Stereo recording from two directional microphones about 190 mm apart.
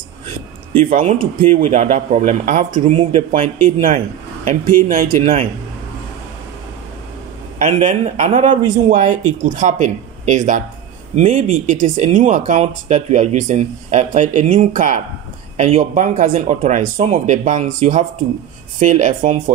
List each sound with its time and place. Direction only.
0.8 s speech: 45° right (ahead or behind)
7.5 s speech: 40° right (ahead or behind)